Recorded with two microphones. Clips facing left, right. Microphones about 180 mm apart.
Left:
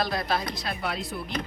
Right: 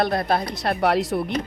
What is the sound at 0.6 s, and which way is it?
Speech, 65° right (ahead or behind).